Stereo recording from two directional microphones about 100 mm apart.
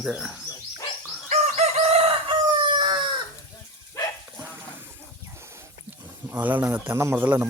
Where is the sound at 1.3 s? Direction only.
90° right; by 3.0 s 55° right (ahead or behind).